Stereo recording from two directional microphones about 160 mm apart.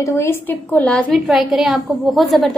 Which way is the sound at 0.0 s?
15° left (ahead or behind).